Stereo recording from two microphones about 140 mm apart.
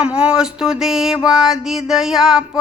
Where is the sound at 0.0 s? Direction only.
5° right (ahead or behind).